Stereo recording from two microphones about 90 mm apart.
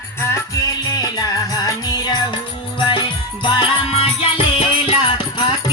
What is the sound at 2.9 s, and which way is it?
Music, 60° left (ahead or behind).